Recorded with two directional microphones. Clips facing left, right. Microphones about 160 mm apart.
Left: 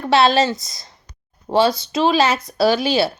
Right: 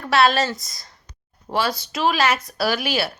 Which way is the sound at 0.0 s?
25° left (ahead or behind).